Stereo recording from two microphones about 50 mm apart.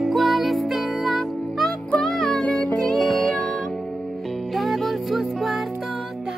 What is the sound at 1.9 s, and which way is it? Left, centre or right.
Music, left.